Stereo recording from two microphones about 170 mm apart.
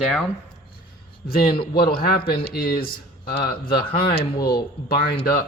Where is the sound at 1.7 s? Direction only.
65° left (ahead or behind).